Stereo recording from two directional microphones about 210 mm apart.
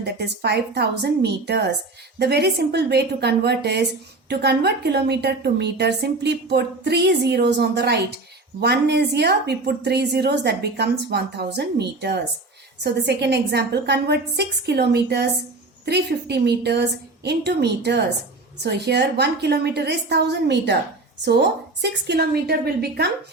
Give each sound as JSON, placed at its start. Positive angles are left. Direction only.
{"t": 0.0, "sound": "a woman's voice", "side_deg": -50}